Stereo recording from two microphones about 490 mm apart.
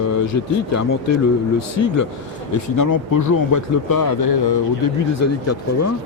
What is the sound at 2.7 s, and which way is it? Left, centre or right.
Speech, left.